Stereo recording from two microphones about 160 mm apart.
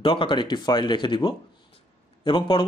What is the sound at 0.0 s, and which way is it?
Speech, 30° left (ahead or behind).